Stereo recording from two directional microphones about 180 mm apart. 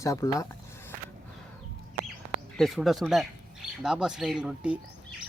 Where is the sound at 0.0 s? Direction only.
15° left (ahead or behind).